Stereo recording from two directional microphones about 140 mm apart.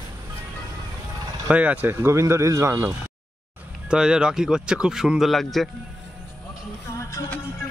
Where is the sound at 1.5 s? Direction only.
10° right (ahead or behind).